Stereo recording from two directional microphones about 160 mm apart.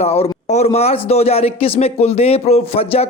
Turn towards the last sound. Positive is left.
turn(degrees=35)  # may be behind; listen again after turning